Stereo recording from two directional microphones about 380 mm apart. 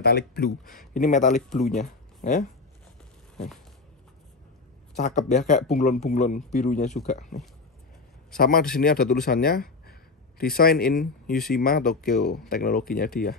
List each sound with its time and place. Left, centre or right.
0.0 s a man's voice: left
1.5 s speech: centre
1.8 s speech: centre
4.9 s a man's voice: centre
8.4 s a man's voice: left